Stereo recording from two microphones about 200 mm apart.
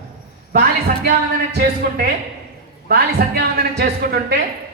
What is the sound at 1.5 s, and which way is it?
A man's voice, 50° right (ahead or behind).